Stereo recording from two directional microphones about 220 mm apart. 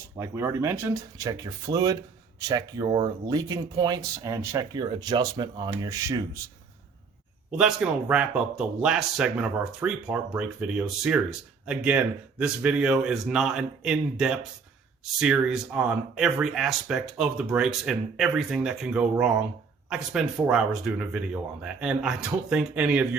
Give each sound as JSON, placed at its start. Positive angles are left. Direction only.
{"t": 0.2, "sound": "speech", "side_deg": -10}
{"t": 7.5, "sound": "speech", "side_deg": -5}